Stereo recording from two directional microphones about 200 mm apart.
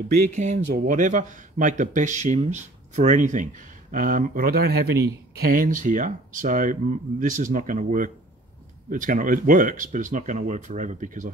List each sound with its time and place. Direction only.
0.3 s speech: 35° right (ahead or behind)